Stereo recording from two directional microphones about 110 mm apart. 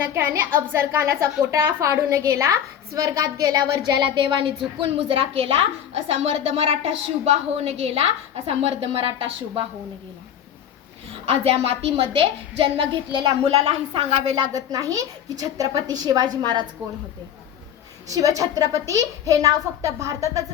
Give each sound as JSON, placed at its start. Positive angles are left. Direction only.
{"t": 0.0, "sound": "a woman's voice", "side_deg": -20}
{"t": 11.3, "sound": "a woman's voice", "side_deg": -60}
{"t": 13.4, "sound": "a woman's voice", "side_deg": -65}
{"t": 14.3, "sound": "a woman's voice", "side_deg": -35}
{"t": 18.1, "sound": "a woman's voice", "side_deg": -30}